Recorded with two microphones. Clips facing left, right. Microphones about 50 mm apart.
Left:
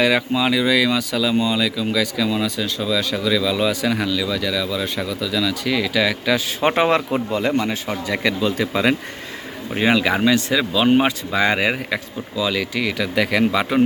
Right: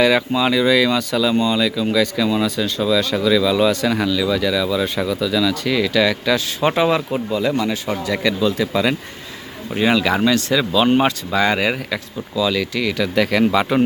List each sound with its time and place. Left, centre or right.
0.0 s speech: centre
6.6 s speech: left
7.5 s speech: left
9.7 s speech: centre